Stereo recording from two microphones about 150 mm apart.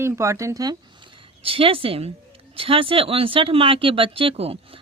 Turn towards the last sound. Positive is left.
turn(degrees=-40)  # may be behind; listen again after turning